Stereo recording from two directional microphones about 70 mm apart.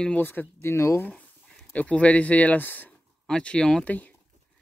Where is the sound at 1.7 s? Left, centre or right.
Centre.